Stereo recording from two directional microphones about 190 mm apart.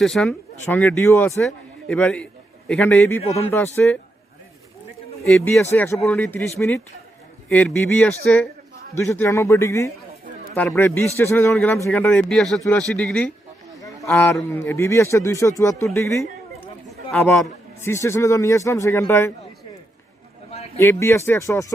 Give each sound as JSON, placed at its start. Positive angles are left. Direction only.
{"t": 0.0, "sound": "a man's voice", "side_deg": 5}
{"t": 3.2, "sound": "a man's voice", "side_deg": 35}
{"t": 3.8, "sound": "speech", "side_deg": 10}
{"t": 5.3, "sound": "a man's voice", "side_deg": 5}
{"t": 17.2, "sound": "chatter", "side_deg": 10}
{"t": 17.8, "sound": "speech", "side_deg": 15}
{"t": 20.7, "sound": "speech", "side_deg": 15}